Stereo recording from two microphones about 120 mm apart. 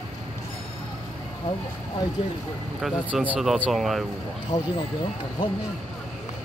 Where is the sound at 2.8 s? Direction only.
Centre (ahead or behind).